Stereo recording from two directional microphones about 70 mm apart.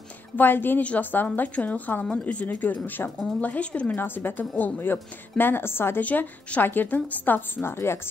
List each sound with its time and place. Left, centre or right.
0.4 s a woman's voice: left
4.0 s a woman's voice: left
6.0 s a woman's voice: left